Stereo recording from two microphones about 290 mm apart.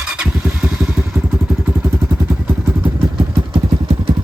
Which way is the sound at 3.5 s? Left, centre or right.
Centre.